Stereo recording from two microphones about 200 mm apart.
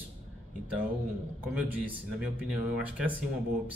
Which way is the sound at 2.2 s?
5° right (ahead or behind).